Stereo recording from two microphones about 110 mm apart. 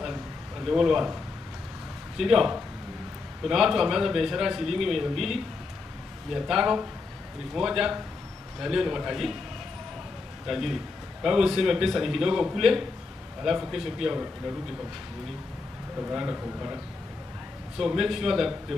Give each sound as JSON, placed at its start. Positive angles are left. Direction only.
{"t": 0.7, "sound": "a man's voice", "side_deg": -5}
{"t": 2.1, "sound": "a man's voice", "side_deg": -5}
{"t": 10.4, "sound": "a man's voice", "side_deg": 0}
{"t": 16.0, "sound": "a man's voice", "side_deg": -15}